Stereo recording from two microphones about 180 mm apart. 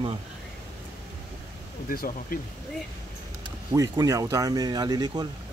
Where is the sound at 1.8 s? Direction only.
50° left (ahead or behind).